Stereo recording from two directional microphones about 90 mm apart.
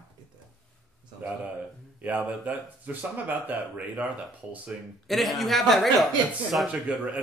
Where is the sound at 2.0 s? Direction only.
15° right (ahead or behind).